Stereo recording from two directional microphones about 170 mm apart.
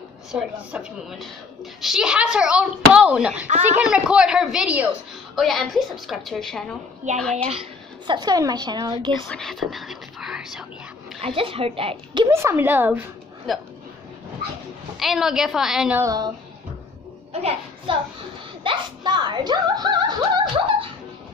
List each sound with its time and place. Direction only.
0.3 s speech: 5° right (ahead or behind)
8.1 s a woman's voice: 25° right (ahead or behind)
9.3 s speech: centre (ahead or behind)
11.1 s speech: 35° right (ahead or behind)
12.3 s speech: 15° right (ahead or behind)
13.5 s speech: centre (ahead or behind)
15.0 s speech: centre (ahead or behind)
16.0 s a woman's voice: 20° right (ahead or behind)
17.3 s a child's voice: 35° right (ahead or behind)